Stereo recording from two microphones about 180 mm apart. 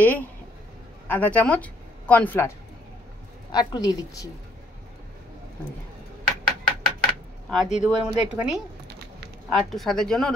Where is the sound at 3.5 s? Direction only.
20° left (ahead or behind).